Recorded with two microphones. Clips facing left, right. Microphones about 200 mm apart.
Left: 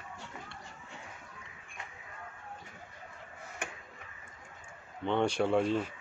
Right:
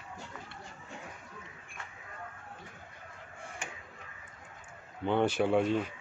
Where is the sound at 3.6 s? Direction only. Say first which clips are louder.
Left 4 dB; 60° left (ahead or behind).